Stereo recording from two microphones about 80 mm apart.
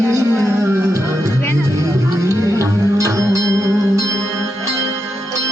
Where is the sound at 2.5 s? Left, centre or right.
Right.